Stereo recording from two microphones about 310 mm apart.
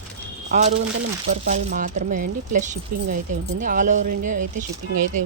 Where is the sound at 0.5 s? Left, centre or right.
Right.